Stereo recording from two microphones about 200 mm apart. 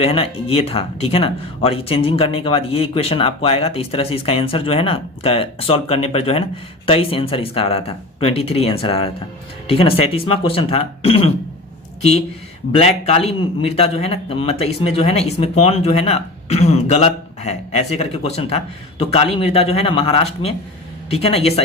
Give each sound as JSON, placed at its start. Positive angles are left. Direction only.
{"t": 0.0, "sound": "speech", "side_deg": 30}
{"t": 12.7, "sound": "a man's voice", "side_deg": 30}